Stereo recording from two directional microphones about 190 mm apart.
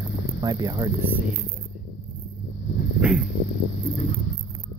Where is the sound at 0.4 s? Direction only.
20° right (ahead or behind).